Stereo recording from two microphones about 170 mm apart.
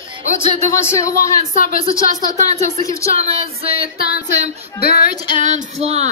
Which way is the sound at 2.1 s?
40° right (ahead or behind).